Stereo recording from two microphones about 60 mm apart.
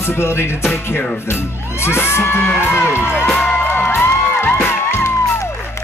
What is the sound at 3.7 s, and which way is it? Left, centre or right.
Music, left.